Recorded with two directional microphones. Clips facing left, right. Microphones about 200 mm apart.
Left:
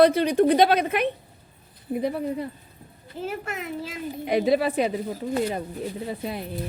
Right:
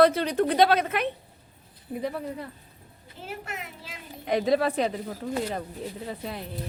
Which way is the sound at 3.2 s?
45° left (ahead or behind).